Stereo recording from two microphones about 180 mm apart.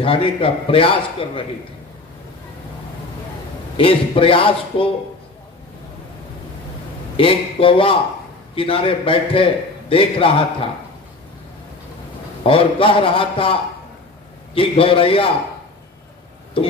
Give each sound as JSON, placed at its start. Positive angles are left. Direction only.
{"t": 0.0, "sound": "a man's voice", "side_deg": 30}
{"t": 3.7, "sound": "a man's voice", "side_deg": 30}
{"t": 7.2, "sound": "a man's voice", "side_deg": 30}
{"t": 12.4, "sound": "a man's voice", "side_deg": 30}
{"t": 16.6, "sound": "speech", "side_deg": 30}